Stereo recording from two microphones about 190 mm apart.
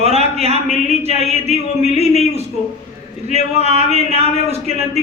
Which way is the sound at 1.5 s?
35° left (ahead or behind).